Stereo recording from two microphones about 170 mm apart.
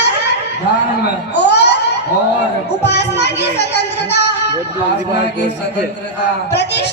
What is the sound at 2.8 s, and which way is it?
Child singing, 85° left.